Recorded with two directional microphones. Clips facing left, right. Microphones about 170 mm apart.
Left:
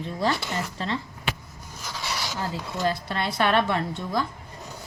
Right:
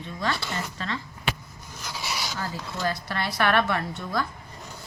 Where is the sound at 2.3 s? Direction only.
20° left (ahead or behind).